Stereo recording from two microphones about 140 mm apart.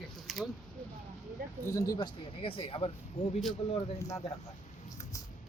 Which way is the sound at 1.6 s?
25° left (ahead or behind).